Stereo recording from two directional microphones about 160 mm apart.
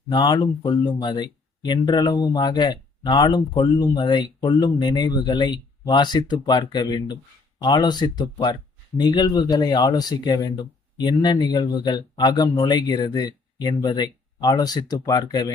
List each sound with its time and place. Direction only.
0.1 s speech: 25° left (ahead or behind)